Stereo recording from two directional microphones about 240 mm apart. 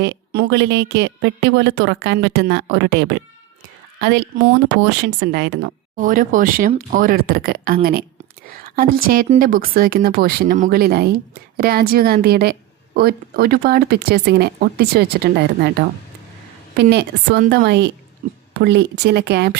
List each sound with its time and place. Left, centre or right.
0.0 s a woman's voice: right
6.0 s a woman's voice: right